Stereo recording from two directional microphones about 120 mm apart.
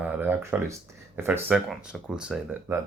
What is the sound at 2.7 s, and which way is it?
Speech, 20° right (ahead or behind).